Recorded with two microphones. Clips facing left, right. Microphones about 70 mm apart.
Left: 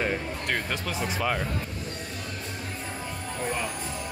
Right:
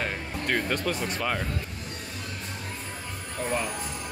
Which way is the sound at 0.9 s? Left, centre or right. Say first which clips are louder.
Left 1 dB; centre.